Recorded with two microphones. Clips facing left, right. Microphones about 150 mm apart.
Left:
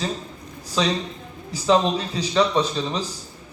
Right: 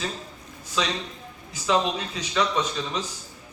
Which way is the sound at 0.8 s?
35° left (ahead or behind).